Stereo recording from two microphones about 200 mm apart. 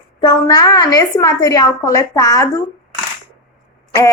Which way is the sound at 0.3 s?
20° left (ahead or behind).